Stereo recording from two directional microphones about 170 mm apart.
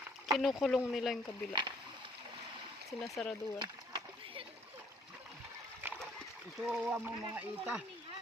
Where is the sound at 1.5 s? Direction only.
30° right (ahead or behind).